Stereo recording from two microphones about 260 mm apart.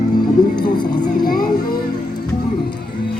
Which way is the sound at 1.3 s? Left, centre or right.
Left.